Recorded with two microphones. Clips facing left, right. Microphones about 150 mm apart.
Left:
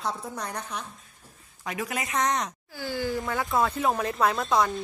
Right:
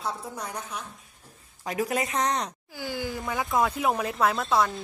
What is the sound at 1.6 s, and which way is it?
Speech, 35° right (ahead or behind).